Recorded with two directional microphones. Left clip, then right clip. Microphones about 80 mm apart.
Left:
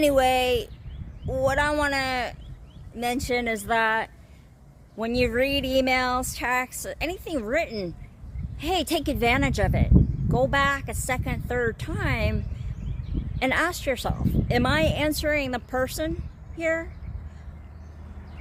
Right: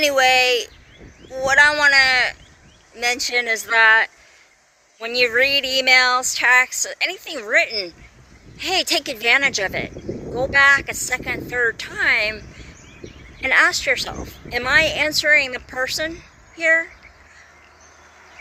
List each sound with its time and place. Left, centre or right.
0.0 s a woman's voice: left
8.5 s a woman's voice: left
13.5 s speech: left